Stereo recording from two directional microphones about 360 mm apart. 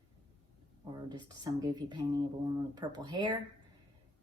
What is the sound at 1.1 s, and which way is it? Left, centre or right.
Speech, centre.